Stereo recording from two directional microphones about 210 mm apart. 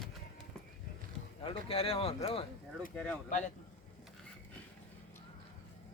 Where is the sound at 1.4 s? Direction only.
25° left (ahead or behind).